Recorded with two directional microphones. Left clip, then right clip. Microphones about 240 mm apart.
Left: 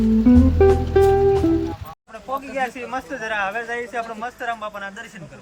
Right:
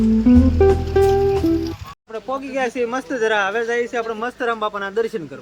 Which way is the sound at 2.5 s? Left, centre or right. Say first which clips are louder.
Right 6 dB; centre.